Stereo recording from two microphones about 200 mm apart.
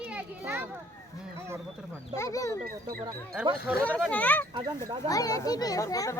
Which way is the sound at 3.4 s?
5° right (ahead or behind).